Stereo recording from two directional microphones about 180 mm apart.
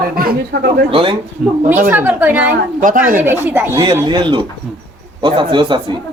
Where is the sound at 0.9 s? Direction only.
30° right (ahead or behind).